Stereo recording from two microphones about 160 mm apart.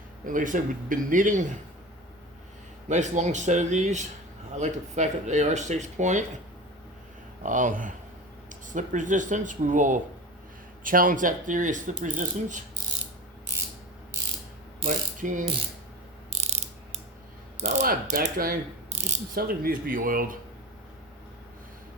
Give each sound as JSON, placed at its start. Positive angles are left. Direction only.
{"t": 0.3, "sound": "a man's voice", "side_deg": -55}
{"t": 2.9, "sound": "speech", "side_deg": -50}
{"t": 7.4, "sound": "a man's voice", "side_deg": -55}
{"t": 14.8, "sound": "ratchet", "side_deg": -55}
{"t": 16.3, "sound": "ratchet", "side_deg": -45}
{"t": 17.6, "sound": "mechanisms", "side_deg": -45}
{"t": 17.8, "sound": "ratchet", "side_deg": -60}
{"t": 18.9, "sound": "speech", "side_deg": -45}
{"t": 19.4, "sound": "a man's voice", "side_deg": -65}